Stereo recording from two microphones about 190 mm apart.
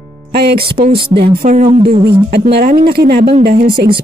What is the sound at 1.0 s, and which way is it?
Speech, 55° right (ahead or behind).